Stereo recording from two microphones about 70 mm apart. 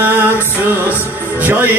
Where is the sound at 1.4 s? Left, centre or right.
Right.